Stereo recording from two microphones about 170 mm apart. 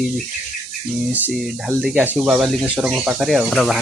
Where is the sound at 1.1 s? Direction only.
5° right (ahead or behind).